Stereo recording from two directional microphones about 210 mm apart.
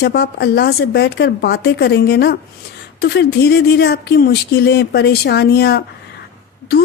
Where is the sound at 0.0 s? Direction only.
50° left (ahead or behind).